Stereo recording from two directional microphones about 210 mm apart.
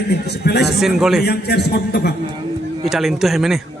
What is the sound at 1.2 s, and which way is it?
Speech, 50° left (ahead or behind).